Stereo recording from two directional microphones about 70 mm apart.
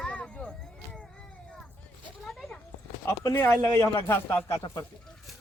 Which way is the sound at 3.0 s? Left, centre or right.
Left.